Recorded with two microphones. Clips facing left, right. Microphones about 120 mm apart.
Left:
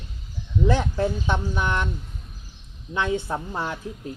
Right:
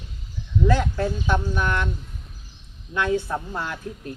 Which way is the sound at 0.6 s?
20° left (ahead or behind).